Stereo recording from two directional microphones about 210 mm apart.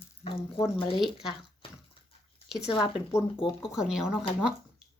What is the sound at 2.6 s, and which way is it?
Speech, 25° left (ahead or behind).